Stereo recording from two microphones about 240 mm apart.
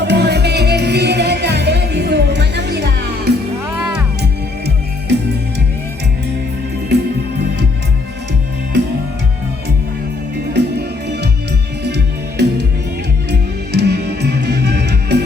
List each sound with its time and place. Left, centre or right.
0.0 s music: right
10.5 s music: right